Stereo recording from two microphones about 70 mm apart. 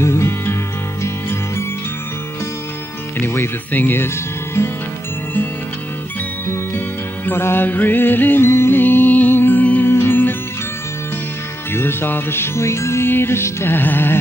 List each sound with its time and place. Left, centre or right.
0.0 s music: left
3.2 s speech: left
4.6 s music: left
6.4 s music: left
11.7 s music: left